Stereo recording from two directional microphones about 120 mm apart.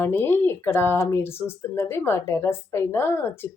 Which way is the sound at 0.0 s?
20° left (ahead or behind).